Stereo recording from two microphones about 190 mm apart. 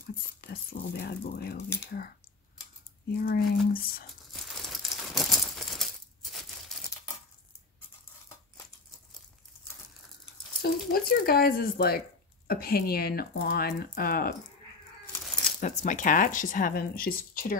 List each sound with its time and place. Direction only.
0.0 s speech: 50° left (ahead or behind)
3.2 s speech: 55° left (ahead or behind)
4.3 s a sound: centre (ahead or behind)
10.6 s speech: 50° left (ahead or behind)
15.6 s speech: 40° left (ahead or behind)